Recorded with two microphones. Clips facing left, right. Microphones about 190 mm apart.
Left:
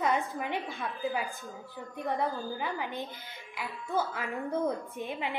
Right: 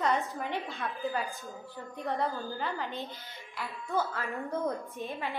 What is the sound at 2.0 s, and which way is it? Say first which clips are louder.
A woman's voice: left 1 dB; 15° left (ahead or behind).